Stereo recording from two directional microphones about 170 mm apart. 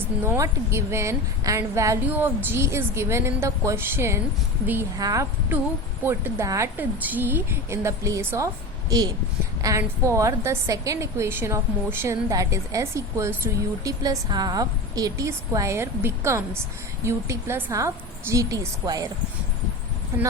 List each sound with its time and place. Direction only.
0.3 s a woman's voice: 15° right (ahead or behind)
9.6 s a woman's voice: 20° right (ahead or behind)